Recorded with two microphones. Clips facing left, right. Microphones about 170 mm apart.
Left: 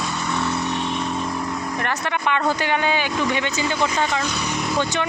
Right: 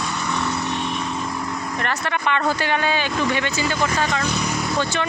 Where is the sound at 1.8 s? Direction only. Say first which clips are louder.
Right 1 dB; 15° left (ahead or behind).